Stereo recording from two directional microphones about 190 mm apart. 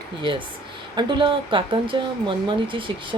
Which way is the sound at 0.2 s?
25° right (ahead or behind).